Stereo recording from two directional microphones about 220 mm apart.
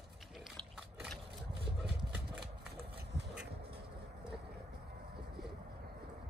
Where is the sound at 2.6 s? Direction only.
45° right (ahead or behind).